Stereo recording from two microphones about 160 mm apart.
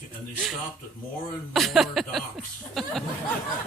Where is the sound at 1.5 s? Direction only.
Centre (ahead or behind).